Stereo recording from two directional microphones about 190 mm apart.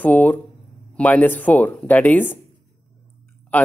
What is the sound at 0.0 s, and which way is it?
Speech, 10° left (ahead or behind).